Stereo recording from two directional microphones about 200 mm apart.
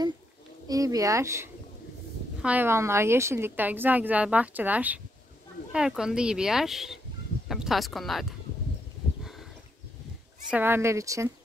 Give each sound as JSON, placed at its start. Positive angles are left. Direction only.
{"t": 0.7, "sound": "a woman's voice", "side_deg": -15}
{"t": 10.5, "sound": "a woman's voice", "side_deg": -10}